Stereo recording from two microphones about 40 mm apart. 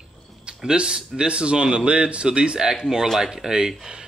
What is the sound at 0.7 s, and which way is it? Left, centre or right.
Speech, centre.